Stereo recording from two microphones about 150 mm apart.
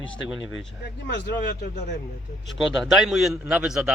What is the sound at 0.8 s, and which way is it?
Speech, 90° left.